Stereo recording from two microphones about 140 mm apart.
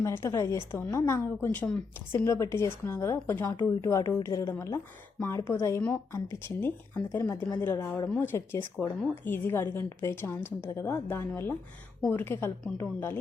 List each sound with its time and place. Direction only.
0.0 s a woman's voice: 20° left (ahead or behind)